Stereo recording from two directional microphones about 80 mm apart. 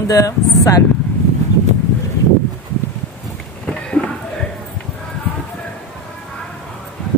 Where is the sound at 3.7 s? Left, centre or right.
Centre.